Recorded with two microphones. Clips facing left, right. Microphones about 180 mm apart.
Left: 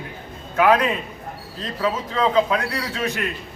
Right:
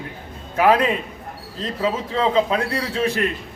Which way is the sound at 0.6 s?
30° right (ahead or behind).